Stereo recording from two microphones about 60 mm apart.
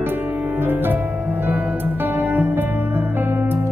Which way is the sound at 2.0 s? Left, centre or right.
Right.